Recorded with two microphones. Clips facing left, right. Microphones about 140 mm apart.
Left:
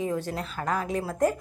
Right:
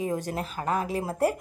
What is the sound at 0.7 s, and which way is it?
Speech, 25° right (ahead or behind).